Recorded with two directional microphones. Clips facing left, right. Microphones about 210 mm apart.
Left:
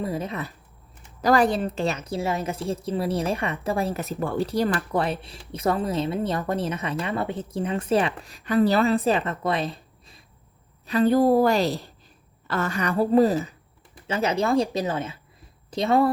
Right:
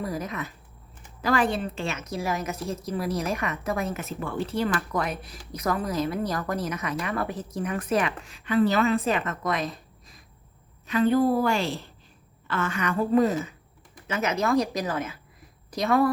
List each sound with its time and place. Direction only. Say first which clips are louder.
0.0 s a woman's voice: left 3 dB; 25° left (ahead or behind)